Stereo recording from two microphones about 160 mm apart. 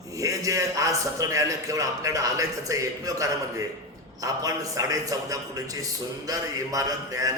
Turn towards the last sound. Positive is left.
turn(degrees=-20)  # may be behind; listen again after turning